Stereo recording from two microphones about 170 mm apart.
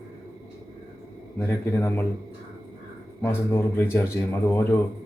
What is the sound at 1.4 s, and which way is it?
Speech, 10° left (ahead or behind).